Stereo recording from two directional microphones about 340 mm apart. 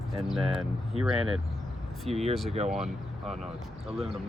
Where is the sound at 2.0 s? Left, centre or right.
Centre.